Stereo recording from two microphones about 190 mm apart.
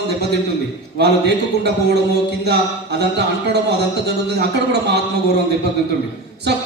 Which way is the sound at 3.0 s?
60° right (ahead or behind).